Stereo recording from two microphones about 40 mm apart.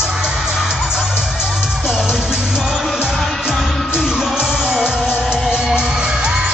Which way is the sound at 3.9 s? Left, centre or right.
Centre.